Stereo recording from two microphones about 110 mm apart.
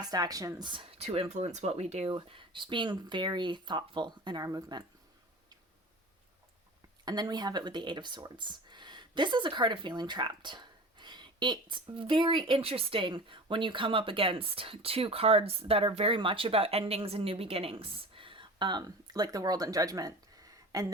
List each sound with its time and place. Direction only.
0.0 s speech: 35° right (ahead or behind)
0.7 s speech: 55° right (ahead or behind); by 2.0 s 75° right (ahead or behind)
2.0 s speech: 50° right (ahead or behind)
7.0 s speech: 40° right (ahead or behind)